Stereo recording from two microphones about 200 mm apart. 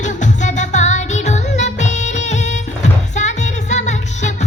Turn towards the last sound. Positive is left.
turn(degrees=35)  # may be behind; listen again after turning